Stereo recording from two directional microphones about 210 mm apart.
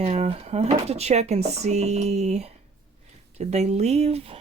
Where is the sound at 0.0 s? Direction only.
30° right (ahead or behind).